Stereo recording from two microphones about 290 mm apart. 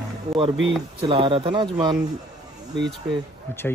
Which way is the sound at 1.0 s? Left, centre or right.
Centre.